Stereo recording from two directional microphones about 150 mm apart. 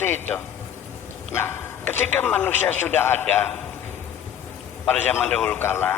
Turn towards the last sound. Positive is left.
turn(degrees=15)  # may be behind; listen again after turning